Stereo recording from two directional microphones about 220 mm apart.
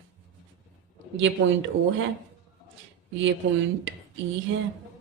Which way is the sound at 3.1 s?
60° right (ahead or behind).